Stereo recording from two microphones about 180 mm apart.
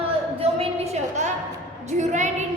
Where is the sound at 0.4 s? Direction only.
35° right (ahead or behind).